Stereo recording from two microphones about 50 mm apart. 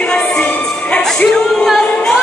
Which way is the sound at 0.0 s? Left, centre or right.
Centre.